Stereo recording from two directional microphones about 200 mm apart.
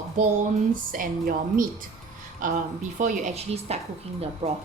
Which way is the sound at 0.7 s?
45° right (ahead or behind).